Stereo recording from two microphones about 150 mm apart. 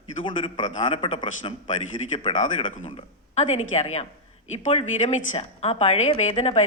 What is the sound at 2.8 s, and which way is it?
A woman's voice, 45° left (ahead or behind).